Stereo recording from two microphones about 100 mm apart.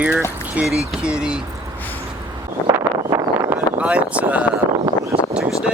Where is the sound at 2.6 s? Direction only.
25° left (ahead or behind).